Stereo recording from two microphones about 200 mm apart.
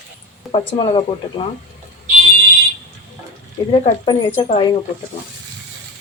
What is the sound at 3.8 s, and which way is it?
Speech, 25° left (ahead or behind).